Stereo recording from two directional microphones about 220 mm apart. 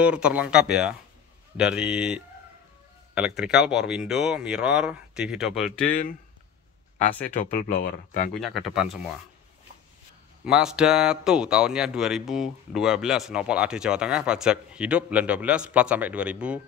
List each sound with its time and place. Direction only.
0.0 s speech: 5° right (ahead or behind)
7.4 s speech: 40° left (ahead or behind)
8.4 s speech: centre (ahead or behind)
10.4 s speech: 5° right (ahead or behind)